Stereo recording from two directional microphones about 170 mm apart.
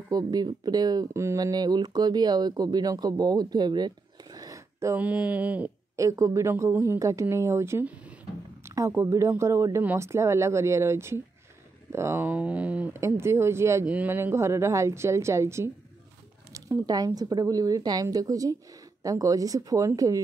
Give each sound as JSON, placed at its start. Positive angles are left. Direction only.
{"t": 0.1, "sound": "speech", "side_deg": -25}
{"t": 5.9, "sound": "speech", "side_deg": -20}